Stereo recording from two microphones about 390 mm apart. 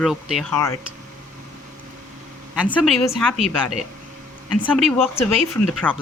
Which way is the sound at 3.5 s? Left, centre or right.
Left.